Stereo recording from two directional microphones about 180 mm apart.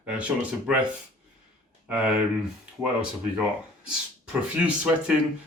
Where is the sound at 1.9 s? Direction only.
5° right (ahead or behind).